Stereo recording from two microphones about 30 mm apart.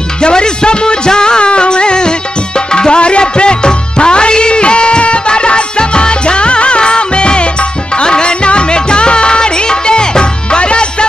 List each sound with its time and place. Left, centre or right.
0.2 s music: left